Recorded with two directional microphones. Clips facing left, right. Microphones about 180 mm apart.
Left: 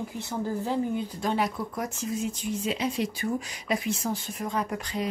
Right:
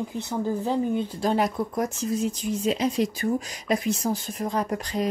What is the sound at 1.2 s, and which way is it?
Speech, 40° right (ahead or behind).